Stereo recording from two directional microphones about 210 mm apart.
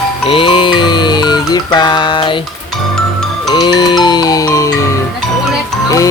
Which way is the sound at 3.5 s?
20° left (ahead or behind).